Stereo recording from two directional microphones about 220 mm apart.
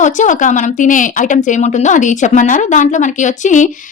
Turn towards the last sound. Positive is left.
turn(degrees=35)  # may be behind; listen again after turning